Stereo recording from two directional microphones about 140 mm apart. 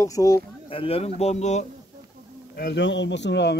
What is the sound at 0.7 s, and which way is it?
A man's voice, 40° left (ahead or behind).